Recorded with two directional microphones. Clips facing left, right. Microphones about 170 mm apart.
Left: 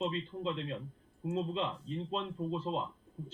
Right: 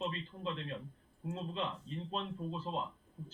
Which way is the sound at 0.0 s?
20° left (ahead or behind).